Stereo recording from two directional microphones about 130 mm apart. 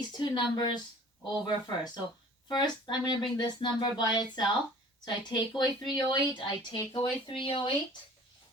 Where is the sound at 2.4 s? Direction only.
35° left (ahead or behind).